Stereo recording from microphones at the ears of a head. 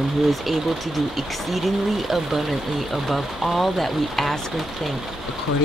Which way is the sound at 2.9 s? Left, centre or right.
Centre.